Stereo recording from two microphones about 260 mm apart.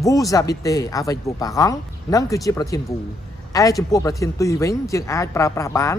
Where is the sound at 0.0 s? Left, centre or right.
Centre.